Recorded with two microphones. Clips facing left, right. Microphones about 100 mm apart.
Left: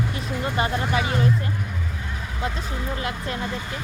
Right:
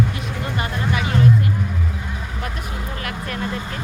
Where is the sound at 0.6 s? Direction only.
25° left (ahead or behind).